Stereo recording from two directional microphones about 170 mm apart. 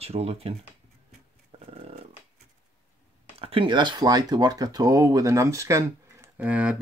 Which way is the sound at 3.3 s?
35° right (ahead or behind).